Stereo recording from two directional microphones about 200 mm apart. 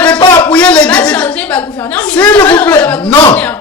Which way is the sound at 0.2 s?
20° left (ahead or behind).